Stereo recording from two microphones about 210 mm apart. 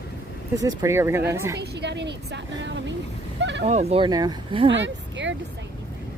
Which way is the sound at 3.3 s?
55° right (ahead or behind).